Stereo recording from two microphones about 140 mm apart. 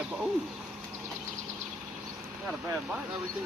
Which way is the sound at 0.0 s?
5° right (ahead or behind).